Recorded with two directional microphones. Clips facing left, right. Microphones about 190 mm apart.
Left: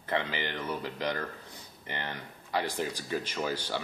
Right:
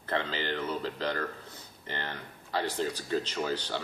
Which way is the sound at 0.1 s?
15° left (ahead or behind).